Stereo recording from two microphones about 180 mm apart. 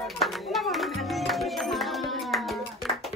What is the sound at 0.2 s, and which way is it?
Music, centre (ahead or behind).